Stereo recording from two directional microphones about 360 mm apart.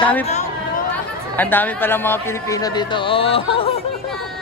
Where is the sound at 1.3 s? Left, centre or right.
Centre.